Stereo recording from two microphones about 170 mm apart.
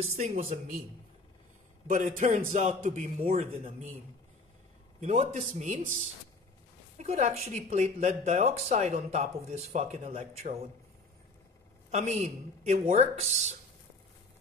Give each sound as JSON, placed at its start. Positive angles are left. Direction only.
{"t": 0.1, "sound": "a woman's voice", "side_deg": -40}
{"t": 1.9, "sound": "a man's voice", "side_deg": -50}
{"t": 5.0, "sound": "a woman's voice", "side_deg": -40}
{"t": 11.9, "sound": "a woman's voice", "side_deg": -40}